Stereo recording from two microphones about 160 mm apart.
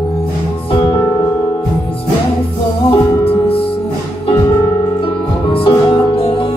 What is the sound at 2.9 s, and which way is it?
Music, 35° left (ahead or behind).